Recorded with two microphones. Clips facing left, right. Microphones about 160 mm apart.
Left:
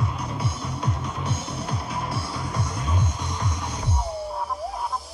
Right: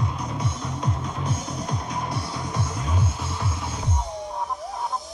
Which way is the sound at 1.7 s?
5° left (ahead or behind).